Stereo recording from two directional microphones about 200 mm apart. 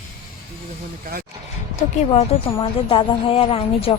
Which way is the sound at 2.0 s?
30° left (ahead or behind).